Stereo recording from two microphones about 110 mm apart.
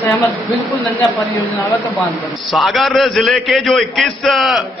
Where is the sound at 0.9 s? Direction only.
25° left (ahead or behind).